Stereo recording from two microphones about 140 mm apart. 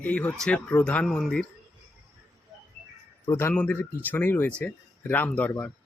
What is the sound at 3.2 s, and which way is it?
Speech, 15° left (ahead or behind).